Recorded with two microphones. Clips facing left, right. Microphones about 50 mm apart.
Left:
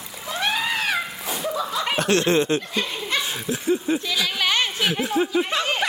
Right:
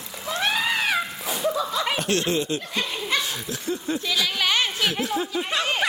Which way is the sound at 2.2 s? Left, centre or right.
Left.